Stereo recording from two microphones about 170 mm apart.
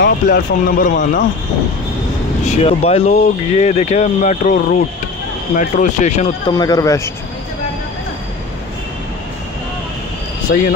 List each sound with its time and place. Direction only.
0.0 s speech: 60° left (ahead or behind)
2.4 s speech: 35° left (ahead or behind)
5.6 s speech: 45° left (ahead or behind)
6.5 s speech: 20° left (ahead or behind)
10.5 s speech: 75° left (ahead or behind)